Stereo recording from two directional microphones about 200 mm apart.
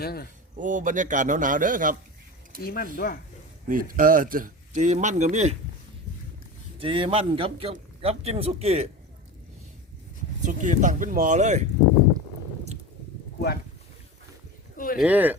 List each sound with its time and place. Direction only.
0.0 s speech: 50° left (ahead or behind)
0.5 s speech: 40° right (ahead or behind)
2.6 s speech: 50° left (ahead or behind)
3.7 s speech: 45° right (ahead or behind)
6.7 s a man's voice: 25° right (ahead or behind)
10.4 s speech: 40° right (ahead or behind)
14.8 s speech: 45° left (ahead or behind)
15.0 s speech: 10° right (ahead or behind)